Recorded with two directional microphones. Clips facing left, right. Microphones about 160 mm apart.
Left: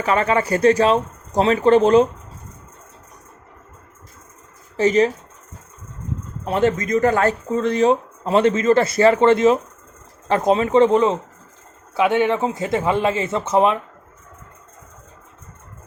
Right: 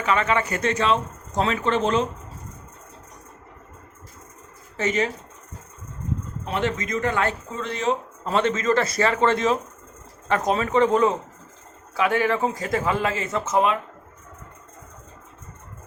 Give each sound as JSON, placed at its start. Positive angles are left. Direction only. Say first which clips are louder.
{"t": 0.0, "sound": "speech", "louder": "left 4 dB", "side_deg": 35}
{"t": 4.8, "sound": "speech", "louder": "left 8 dB", "side_deg": 35}
{"t": 6.4, "sound": "a man's voice", "louder": "left 8 dB", "side_deg": 40}